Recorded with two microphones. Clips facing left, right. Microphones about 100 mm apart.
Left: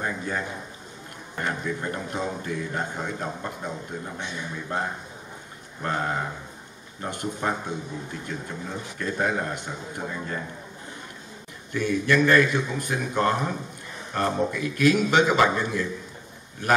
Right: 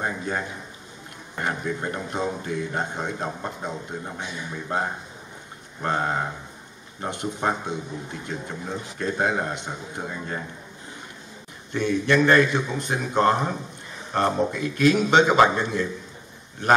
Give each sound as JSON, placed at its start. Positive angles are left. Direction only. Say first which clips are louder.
{"t": 0.0, "sound": "a man's voice", "louder": "right 1 dB", "side_deg": -30}
{"t": 1.3, "sound": "a man's voice", "louder": "right 1 dB", "side_deg": -20}
{"t": 11.7, "sound": "a man's voice", "louder": "right 1 dB", "side_deg": -25}